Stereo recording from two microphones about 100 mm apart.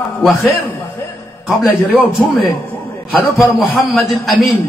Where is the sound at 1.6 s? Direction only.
Centre (ahead or behind).